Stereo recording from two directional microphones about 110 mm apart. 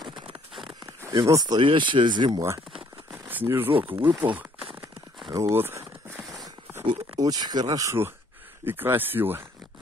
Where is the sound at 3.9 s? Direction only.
50° right (ahead or behind).